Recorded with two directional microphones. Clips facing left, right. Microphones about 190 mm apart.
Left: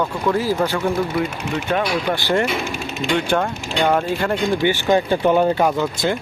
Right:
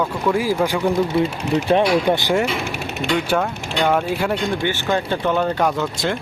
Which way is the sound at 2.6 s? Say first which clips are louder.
Even; 65° right (ahead or behind).